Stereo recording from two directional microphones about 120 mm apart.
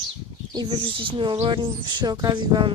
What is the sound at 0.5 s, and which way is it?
Speech, 40° right (ahead or behind).